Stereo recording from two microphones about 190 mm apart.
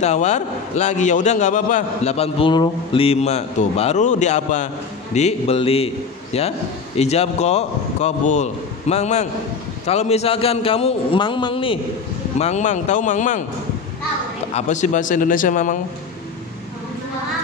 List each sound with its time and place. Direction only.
0.0 s a man's voice: 40° left (ahead or behind)
14.5 s a man's voice: 40° left (ahead or behind)